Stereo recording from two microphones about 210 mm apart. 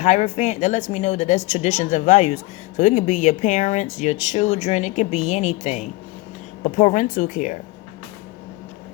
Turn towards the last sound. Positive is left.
turn(degrees=35)  # may be behind; listen again after turning